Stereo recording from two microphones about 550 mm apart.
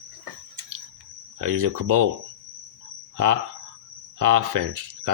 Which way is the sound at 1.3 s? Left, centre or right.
Right.